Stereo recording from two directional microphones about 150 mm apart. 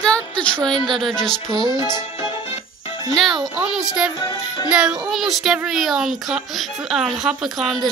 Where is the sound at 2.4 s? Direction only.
40° left (ahead or behind).